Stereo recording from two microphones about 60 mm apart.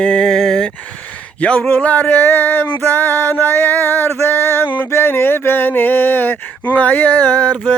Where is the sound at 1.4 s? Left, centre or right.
Left.